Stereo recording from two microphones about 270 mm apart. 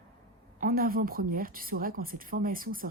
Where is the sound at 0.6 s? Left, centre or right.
Right.